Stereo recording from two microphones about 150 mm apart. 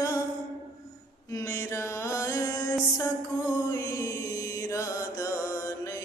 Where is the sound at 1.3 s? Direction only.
20° left (ahead or behind).